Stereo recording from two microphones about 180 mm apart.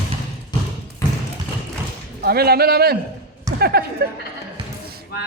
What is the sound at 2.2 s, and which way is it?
Speech, 60° right (ahead or behind).